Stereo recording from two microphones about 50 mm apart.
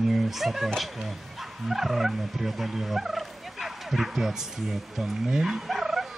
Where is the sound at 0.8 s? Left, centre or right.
Centre.